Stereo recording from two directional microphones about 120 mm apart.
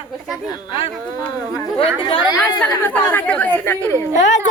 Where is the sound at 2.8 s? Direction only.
15° left (ahead or behind).